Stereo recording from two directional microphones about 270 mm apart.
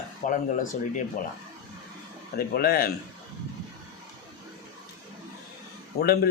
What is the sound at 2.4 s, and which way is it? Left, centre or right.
Speech, left.